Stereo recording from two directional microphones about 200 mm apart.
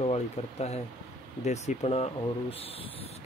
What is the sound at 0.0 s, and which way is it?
Speech, 30° left (ahead or behind).